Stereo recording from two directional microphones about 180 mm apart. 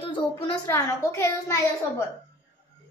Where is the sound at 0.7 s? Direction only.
20° left (ahead or behind).